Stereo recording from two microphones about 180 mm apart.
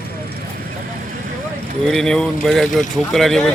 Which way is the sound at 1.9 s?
5° left (ahead or behind).